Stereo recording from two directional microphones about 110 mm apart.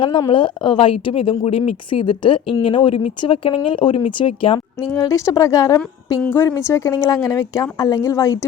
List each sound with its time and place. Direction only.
0.3 s speech: 45° left (ahead or behind)
4.9 s a woman's voice: 30° left (ahead or behind)